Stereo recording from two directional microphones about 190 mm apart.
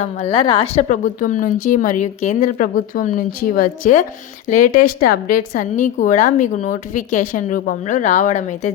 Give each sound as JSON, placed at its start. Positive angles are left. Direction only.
{"t": 0.0, "sound": "a woman's voice", "side_deg": 35}